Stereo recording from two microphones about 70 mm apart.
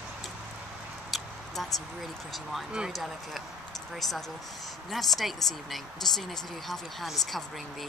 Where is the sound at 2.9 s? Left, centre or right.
Centre.